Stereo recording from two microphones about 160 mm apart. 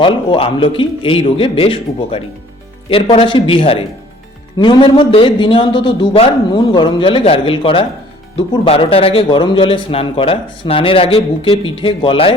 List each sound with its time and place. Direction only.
0.0 s speech: 35° left (ahead or behind)